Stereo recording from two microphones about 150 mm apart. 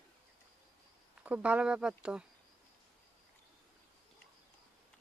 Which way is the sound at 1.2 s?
10° right (ahead or behind).